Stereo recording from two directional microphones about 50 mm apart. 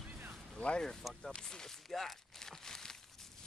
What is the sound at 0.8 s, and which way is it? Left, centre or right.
Speech, centre.